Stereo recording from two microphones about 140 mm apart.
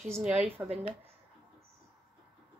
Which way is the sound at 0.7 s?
50° right (ahead or behind).